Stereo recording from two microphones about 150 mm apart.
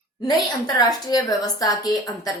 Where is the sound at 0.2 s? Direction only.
30° left (ahead or behind).